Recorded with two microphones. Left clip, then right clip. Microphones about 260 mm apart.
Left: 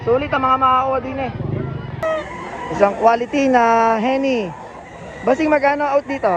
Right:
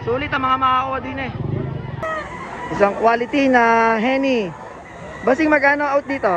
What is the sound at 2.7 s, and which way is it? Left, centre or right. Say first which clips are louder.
Speech: left 2 dB; centre.